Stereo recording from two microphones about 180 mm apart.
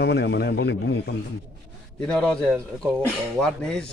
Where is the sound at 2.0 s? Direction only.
5° left (ahead or behind).